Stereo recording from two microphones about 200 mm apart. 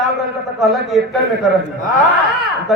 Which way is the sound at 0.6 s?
Centre (ahead or behind).